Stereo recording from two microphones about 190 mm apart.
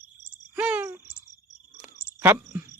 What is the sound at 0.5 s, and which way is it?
Cricket, 10° right (ahead or behind).